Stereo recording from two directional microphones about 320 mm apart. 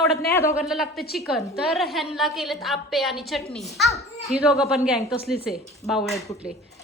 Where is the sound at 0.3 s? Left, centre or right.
Centre.